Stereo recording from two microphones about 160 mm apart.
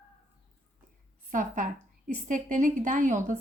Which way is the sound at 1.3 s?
55° right (ahead or behind).